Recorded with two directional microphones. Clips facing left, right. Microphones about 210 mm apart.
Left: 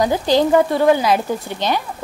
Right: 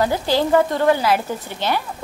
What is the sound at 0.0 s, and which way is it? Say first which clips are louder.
Speech: left 3 dB; 15° left (ahead or behind).